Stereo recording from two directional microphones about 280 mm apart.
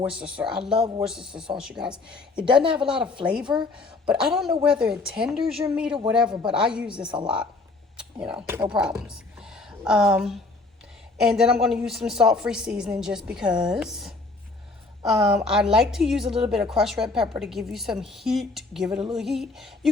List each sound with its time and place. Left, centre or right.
0.0 s a woman's voice: centre
3.4 s speech: centre
3.8 s a woman's voice: centre
7.1 s speech: centre
7.9 s a woman's voice: centre